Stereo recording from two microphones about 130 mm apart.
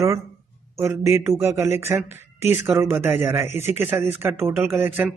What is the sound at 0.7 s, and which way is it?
Speech, 20° right (ahead or behind).